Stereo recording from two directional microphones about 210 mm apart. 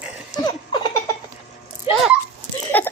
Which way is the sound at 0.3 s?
20° left (ahead or behind).